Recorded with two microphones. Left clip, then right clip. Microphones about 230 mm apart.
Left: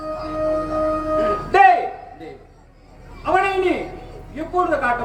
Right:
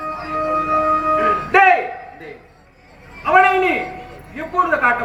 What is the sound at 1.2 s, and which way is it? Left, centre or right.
Music, left.